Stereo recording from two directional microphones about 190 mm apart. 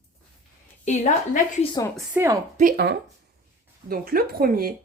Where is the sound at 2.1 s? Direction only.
15° right (ahead or behind).